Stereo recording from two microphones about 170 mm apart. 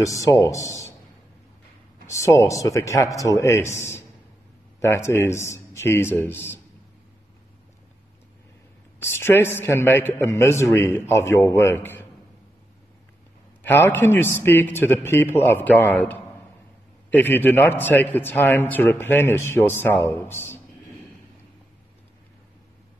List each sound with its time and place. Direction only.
0.0 s speech: 20° left (ahead or behind)
2.0 s a man's voice: 15° left (ahead or behind)
9.0 s a man's voice: 15° left (ahead or behind)
13.6 s a man's voice: 10° left (ahead or behind)